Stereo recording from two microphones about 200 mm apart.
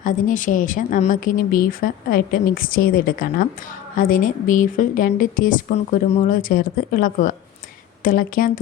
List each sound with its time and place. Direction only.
0.0 s a woman's voice: 40° left (ahead or behind)